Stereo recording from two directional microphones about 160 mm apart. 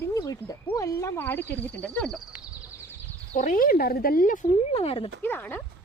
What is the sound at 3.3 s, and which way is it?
Speech, 55° left (ahead or behind).